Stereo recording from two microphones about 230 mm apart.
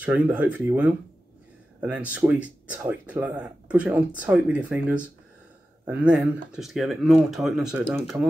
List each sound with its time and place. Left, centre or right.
0.0 s speech: centre